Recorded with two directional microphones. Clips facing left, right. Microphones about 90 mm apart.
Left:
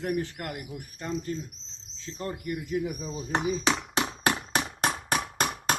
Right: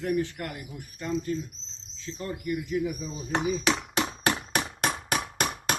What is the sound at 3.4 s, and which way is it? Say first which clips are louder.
Speech: right 2 dB; centre (ahead or behind).